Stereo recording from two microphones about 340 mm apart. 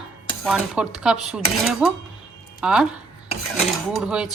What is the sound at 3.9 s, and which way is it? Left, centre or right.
Speech, centre.